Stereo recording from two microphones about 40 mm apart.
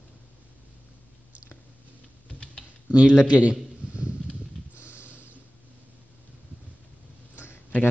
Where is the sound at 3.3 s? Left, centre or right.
Right.